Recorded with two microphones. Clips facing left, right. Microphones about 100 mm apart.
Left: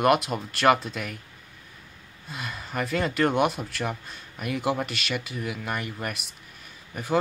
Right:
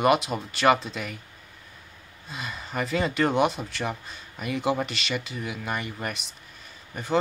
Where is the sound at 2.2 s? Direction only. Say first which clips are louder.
Even; centre (ahead or behind).